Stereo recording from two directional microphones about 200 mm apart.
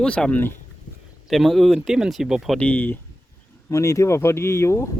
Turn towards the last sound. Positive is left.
turn(degrees=15)  # may be behind; listen again after turning